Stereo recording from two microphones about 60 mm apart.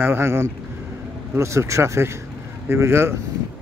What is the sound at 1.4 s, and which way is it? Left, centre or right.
A man's voice, right.